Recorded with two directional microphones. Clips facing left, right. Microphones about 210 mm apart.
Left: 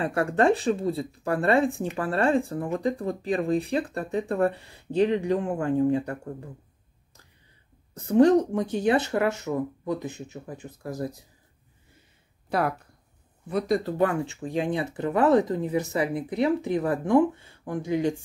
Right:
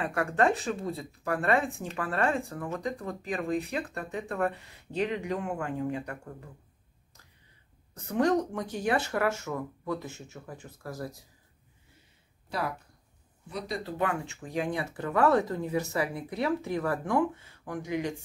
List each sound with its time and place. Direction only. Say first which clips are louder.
0.0 s speech: left 4 dB; 30° left (ahead or behind)
7.9 s speech: left 8 dB; 30° left (ahead or behind)
12.4 s speech: left 7 dB; 55° left (ahead or behind); by 18.1 s 30° left (ahead or behind)